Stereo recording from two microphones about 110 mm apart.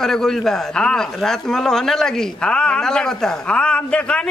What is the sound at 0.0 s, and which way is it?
A man's voice, 5° left (ahead or behind).